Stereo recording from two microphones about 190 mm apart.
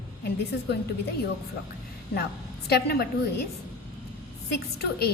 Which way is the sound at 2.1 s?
55° left (ahead or behind).